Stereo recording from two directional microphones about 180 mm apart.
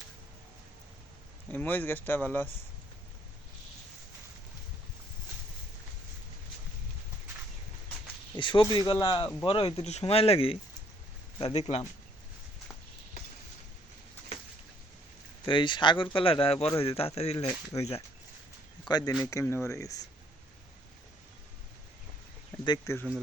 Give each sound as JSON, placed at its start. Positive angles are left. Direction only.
{"t": 1.5, "sound": "speech", "side_deg": 10}
{"t": 8.4, "sound": "speech", "side_deg": 25}
{"t": 15.4, "sound": "speech", "side_deg": 25}
{"t": 18.9, "sound": "speech", "side_deg": 25}
{"t": 22.6, "sound": "speech", "side_deg": 25}